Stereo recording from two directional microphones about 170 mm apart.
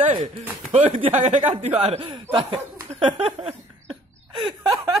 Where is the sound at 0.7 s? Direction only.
45° right (ahead or behind).